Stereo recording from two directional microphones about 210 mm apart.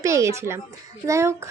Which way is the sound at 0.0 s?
15° right (ahead or behind).